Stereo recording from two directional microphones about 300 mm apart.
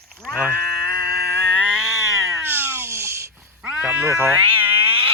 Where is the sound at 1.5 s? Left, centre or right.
Centre.